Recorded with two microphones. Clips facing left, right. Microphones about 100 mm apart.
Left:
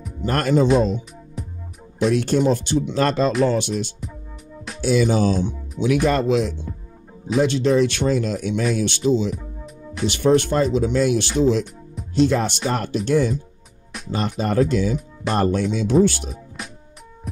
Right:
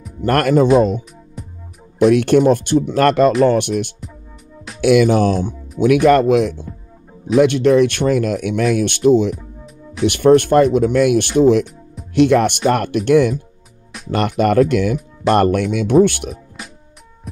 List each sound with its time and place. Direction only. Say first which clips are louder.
0.2 s speech: right 5 dB; 60° right (ahead or behind)
1.4 s music: left 1 dB; centre (ahead or behind)
2.0 s speech: right 7 dB; 60° right (ahead or behind)
16.6 s music: even; centre (ahead or behind)